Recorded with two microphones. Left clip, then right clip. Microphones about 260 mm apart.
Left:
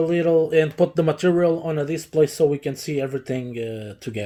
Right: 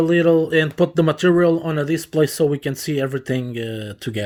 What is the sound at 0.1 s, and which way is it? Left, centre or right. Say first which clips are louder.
Speech: right 3 dB; right.